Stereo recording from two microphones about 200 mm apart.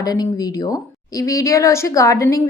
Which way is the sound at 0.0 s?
20° left (ahead or behind).